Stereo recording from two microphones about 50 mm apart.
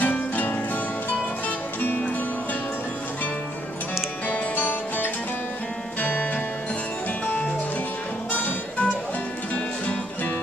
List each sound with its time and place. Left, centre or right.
0.0 s music: left
1.8 s music: left
4.3 s music: left
8.3 s music: left